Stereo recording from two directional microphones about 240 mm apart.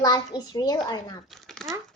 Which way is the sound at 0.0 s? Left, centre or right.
Centre.